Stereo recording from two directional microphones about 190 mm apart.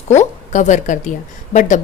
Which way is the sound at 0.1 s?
40° left (ahead or behind).